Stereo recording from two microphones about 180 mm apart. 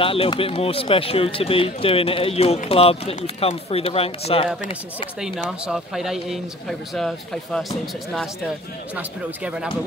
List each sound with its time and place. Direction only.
0.0 s speech: 30° left (ahead or behind)
5.2 s speech: centre (ahead or behind)
8.9 s speech: 5° right (ahead or behind)